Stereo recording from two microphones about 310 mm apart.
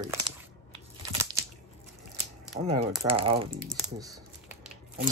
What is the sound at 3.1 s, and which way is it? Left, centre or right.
Speech, centre.